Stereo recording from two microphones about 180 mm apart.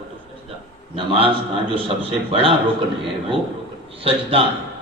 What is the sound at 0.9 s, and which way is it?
A man's voice, 30° right (ahead or behind).